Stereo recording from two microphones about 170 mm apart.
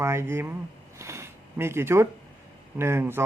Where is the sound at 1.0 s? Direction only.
15° right (ahead or behind).